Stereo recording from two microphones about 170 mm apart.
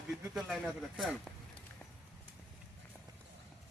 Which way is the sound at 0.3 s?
5° right (ahead or behind).